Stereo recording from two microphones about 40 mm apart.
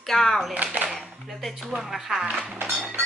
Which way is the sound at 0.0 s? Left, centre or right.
Centre.